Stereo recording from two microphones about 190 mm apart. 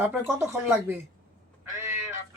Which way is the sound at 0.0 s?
10° right (ahead or behind).